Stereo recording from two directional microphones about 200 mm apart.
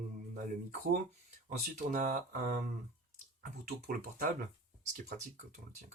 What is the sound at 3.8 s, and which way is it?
Speech, 45° right (ahead or behind).